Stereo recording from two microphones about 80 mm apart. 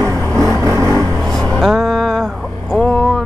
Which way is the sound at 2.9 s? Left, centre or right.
Centre.